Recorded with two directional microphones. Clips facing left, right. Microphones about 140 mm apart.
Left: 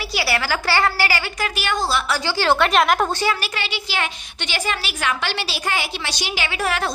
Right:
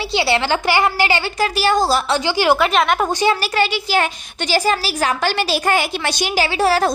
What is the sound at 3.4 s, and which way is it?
Speech, 45° right (ahead or behind).